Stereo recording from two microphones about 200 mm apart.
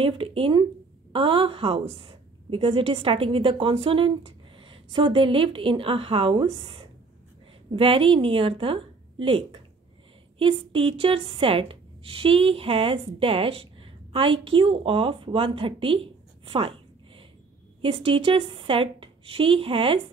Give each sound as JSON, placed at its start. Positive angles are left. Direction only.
{"t": 0.0, "sound": "a woman's voice", "side_deg": -25}